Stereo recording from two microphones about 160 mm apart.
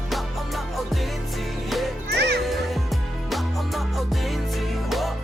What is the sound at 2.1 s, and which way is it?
Music, 90° right.